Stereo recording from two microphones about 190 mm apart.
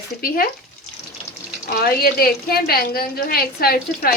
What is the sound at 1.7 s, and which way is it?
Speech, 50° left (ahead or behind).